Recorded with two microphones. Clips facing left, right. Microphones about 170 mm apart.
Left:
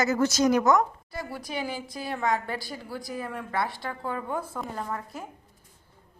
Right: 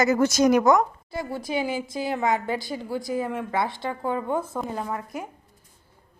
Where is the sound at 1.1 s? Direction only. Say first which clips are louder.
Right 6 dB; 25° right (ahead or behind).